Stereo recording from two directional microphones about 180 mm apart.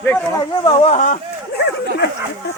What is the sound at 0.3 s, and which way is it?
Speech, 30° left (ahead or behind).